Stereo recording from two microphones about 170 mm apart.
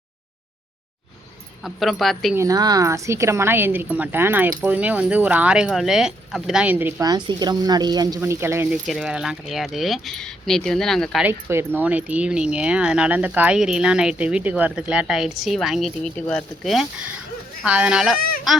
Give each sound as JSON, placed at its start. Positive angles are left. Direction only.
{"t": 1.6, "sound": "speech", "side_deg": 0}
{"t": 2.3, "sound": "speech", "side_deg": -20}
{"t": 7.0, "sound": "speech", "side_deg": -25}
{"t": 11.3, "sound": "speech", "side_deg": -15}